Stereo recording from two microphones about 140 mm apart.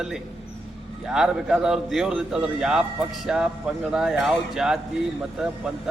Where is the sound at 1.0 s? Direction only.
5° right (ahead or behind).